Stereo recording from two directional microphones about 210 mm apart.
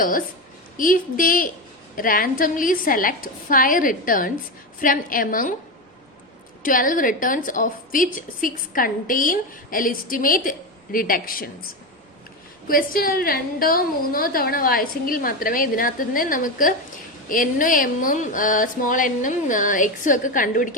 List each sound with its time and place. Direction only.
0.8 s a woman's voice: 40° left (ahead or behind)
6.6 s a woman's voice: 40° left (ahead or behind)
12.6 s a woman's voice: 45° left (ahead or behind)